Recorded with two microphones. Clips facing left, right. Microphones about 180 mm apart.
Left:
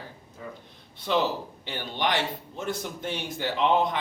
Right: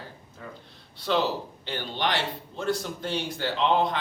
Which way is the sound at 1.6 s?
15° left (ahead or behind).